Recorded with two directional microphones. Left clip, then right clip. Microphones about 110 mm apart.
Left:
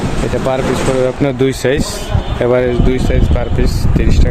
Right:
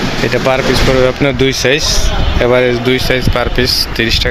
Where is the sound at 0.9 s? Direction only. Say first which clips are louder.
Right 3 dB; 15° left (ahead or behind).